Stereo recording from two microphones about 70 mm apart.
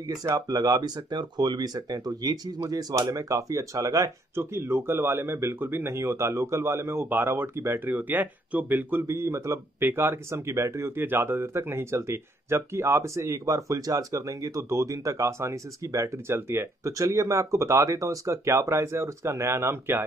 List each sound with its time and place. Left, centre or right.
0.5 s speech: right
4.4 s speech: right
9.0 s speech: right